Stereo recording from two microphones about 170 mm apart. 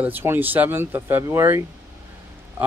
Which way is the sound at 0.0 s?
10° right (ahead or behind).